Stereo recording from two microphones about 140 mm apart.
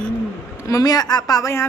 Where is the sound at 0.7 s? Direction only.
25° left (ahead or behind).